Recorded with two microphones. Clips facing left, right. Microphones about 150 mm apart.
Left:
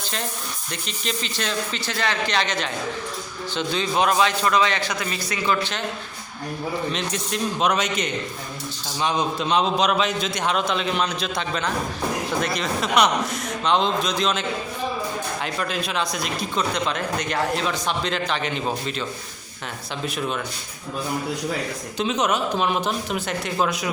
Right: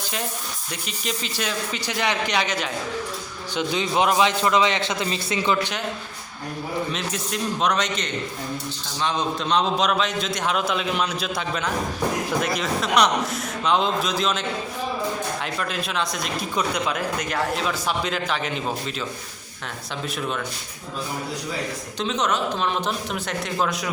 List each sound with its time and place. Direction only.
0.9 s a man's voice: 5° right (ahead or behind)
6.9 s a man's voice: centre (ahead or behind)
15.5 s a man's voice: centre (ahead or behind)
20.1 s a man's voice: 5° left (ahead or behind)
21.9 s a man's voice: 10° left (ahead or behind)